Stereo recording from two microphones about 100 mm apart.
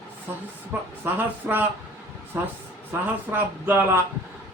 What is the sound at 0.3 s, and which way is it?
Speech, 20° right (ahead or behind).